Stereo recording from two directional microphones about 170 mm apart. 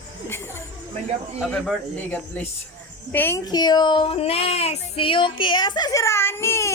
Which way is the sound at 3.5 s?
25° left (ahead or behind).